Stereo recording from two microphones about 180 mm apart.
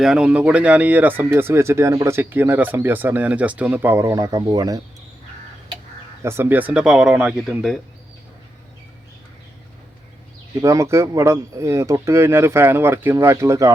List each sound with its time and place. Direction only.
0.0 s speech: 5° right (ahead or behind); by 4.8 s 20° right (ahead or behind)
6.2 s speech: 15° right (ahead or behind)
10.6 s speech: 15° right (ahead or behind)